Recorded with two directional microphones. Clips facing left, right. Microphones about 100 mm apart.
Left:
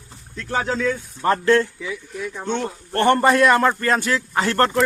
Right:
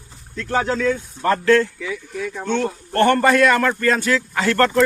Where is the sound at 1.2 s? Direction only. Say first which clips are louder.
Right 1 dB; 25° left (ahead or behind).